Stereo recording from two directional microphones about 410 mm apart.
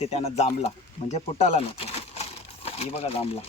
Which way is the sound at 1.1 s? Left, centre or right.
Centre.